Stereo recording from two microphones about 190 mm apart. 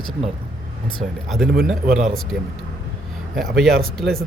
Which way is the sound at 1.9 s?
40° right (ahead or behind).